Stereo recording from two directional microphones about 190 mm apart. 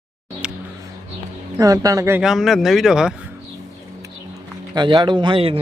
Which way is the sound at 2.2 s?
Centre (ahead or behind).